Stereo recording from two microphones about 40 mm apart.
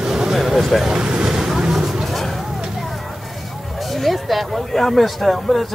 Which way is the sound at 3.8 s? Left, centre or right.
Centre.